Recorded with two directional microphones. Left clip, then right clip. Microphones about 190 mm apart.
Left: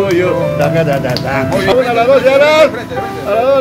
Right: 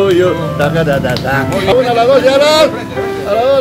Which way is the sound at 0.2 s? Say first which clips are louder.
Even; 20° right (ahead or behind).